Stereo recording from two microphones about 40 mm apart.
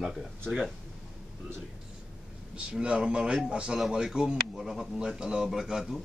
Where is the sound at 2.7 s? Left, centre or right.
Right.